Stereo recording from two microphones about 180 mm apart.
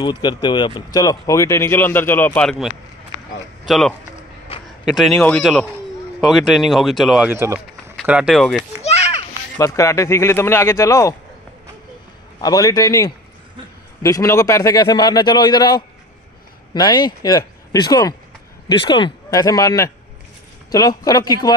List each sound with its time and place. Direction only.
0.0 s speech: 25° left (ahead or behind); by 3.9 s centre (ahead or behind)
4.5 s a sound: 30° left (ahead or behind)
4.8 s speech: centre (ahead or behind)
7.2 s speech: 15° right (ahead or behind)
8.8 s children playing: 35° left (ahead or behind)
9.6 s speech: 15° left (ahead or behind)
12.4 s a man's voice: 20° left (ahead or behind)